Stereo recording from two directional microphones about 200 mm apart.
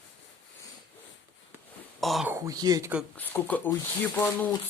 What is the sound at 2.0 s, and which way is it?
Speech, centre (ahead or behind).